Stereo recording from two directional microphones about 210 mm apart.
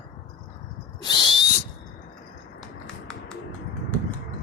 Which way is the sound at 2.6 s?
5° left (ahead or behind).